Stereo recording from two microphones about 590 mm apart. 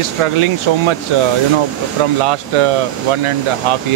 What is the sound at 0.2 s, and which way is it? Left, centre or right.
Speech, right.